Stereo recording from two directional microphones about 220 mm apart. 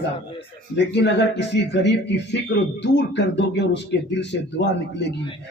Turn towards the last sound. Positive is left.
turn(degrees=50)  # may be behind; listen again after turning